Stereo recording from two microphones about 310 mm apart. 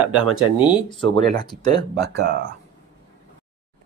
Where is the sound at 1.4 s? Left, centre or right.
Centre.